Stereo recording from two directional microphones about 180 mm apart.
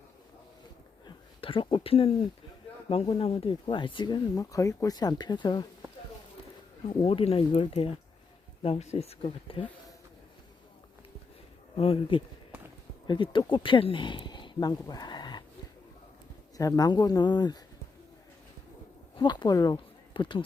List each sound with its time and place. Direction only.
1.0 s a sound: 30° left (ahead or behind)
3.2 s speech: 30° left (ahead or behind)
7.0 s speech: 30° left (ahead or behind)
11.8 s speech: 30° left (ahead or behind)
16.6 s speech: 20° left (ahead or behind)
19.1 s speech: 25° left (ahead or behind)